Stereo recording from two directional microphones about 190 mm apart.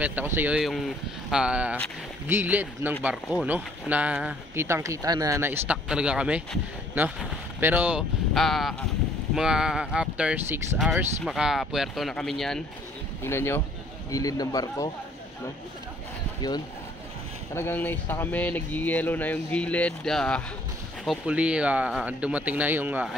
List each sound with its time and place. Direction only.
0.0 s speech: 10° right (ahead or behind)
13.2 s a man's voice: 15° left (ahead or behind)
16.3 s speech: 20° left (ahead or behind)
17.6 s speech: 10° left (ahead or behind); by 23.1 s 10° right (ahead or behind)